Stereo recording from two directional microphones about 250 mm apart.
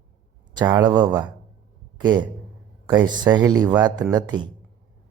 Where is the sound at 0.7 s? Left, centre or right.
Centre.